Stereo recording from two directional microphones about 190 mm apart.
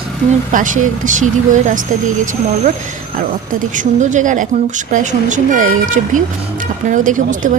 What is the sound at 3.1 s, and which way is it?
A woman's voice, 45° right (ahead or behind).